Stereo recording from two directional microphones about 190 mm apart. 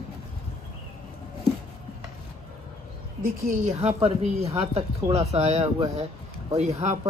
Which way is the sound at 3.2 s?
45° right (ahead or behind).